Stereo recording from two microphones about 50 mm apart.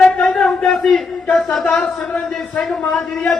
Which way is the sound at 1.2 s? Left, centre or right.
Left.